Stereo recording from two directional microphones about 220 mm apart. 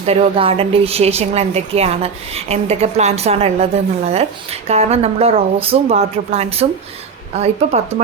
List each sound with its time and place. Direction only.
0.0 s a woman's voice: 30° right (ahead or behind)